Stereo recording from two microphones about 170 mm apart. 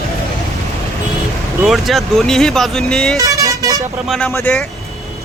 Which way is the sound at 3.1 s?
20° right (ahead or behind).